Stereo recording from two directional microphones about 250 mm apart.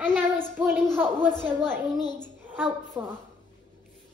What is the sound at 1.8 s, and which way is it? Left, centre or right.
Speech, centre.